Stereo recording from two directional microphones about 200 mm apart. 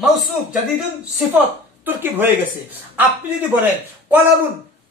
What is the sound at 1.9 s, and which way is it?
Speech, 10° right (ahead or behind).